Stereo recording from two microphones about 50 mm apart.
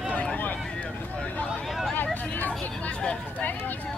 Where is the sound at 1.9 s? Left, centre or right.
Left.